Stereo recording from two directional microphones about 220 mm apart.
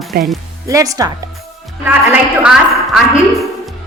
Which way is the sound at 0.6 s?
15° right (ahead or behind).